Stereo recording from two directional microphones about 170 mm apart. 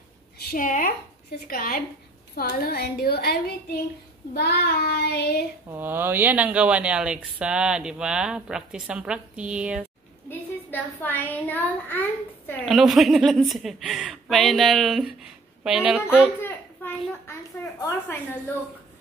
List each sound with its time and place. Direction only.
0.4 s a woman's voice: 60° left (ahead or behind)
4.3 s child singing: 70° left (ahead or behind)
5.7 s speech: 10° right (ahead or behind)
10.7 s a woman's voice: 10° left (ahead or behind)
12.6 s a woman's voice: centre (ahead or behind)
16.1 s a sound: 10° left (ahead or behind)
17.3 s a woman's voice: 15° left (ahead or behind)